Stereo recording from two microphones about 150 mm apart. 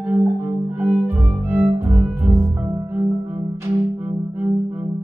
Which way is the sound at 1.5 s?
15° right (ahead or behind).